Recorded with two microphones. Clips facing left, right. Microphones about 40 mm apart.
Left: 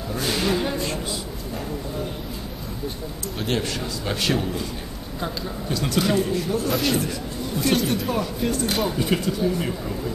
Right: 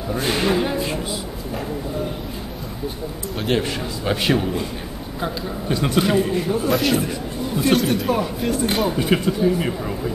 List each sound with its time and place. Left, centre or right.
0.1 s a man's voice: right
3.4 s a man's voice: centre
6.7 s a man's voice: centre